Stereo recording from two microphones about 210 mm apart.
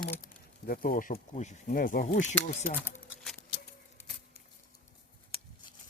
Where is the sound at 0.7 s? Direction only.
40° left (ahead or behind).